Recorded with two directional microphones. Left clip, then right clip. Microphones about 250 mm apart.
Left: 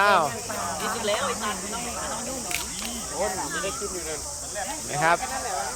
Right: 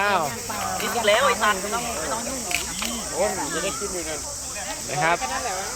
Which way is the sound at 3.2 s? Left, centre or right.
Right.